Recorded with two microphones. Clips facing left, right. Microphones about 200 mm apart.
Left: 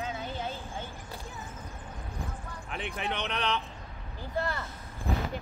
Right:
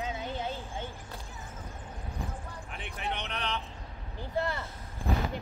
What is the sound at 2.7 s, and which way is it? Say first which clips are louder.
Speech: left 4 dB; 90° left.